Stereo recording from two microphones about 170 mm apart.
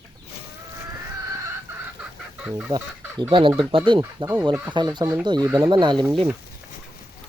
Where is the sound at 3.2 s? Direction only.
30° right (ahead or behind).